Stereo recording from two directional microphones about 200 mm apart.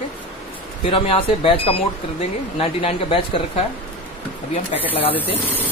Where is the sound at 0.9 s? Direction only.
25° left (ahead or behind).